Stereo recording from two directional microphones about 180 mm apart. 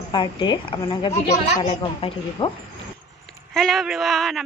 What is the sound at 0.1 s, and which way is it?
A woman's voice, 25° left (ahead or behind).